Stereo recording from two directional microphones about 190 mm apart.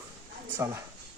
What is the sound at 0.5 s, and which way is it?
Speech, 15° right (ahead or behind).